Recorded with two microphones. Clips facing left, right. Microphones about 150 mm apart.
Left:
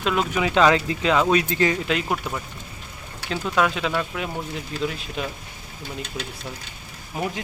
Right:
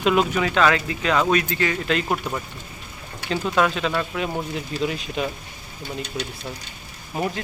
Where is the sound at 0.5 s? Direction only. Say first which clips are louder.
Left 4 dB; 25° left (ahead or behind).